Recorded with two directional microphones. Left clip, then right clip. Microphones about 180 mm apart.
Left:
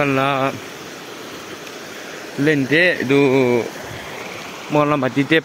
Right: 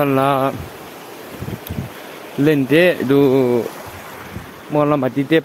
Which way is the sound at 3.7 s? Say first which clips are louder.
Left 1 dB; 35° left (ahead or behind).